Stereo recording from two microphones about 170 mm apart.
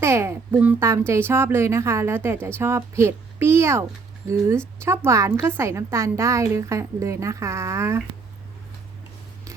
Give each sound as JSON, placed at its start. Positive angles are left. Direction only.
{"t": 0.0, "sound": "a child's voice", "side_deg": -15}